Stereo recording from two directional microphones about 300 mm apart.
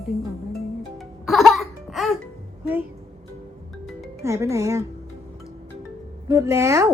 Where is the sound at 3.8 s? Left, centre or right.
Centre.